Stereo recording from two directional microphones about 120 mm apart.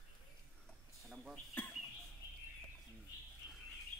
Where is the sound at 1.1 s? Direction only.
Centre (ahead or behind).